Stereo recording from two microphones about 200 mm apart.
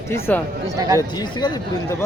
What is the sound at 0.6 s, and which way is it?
Speech, 15° right (ahead or behind).